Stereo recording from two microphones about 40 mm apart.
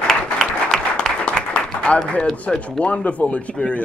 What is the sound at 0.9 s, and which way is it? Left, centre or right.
Applause, left.